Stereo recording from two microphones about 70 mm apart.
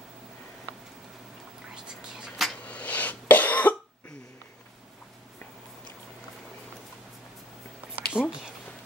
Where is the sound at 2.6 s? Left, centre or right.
Left.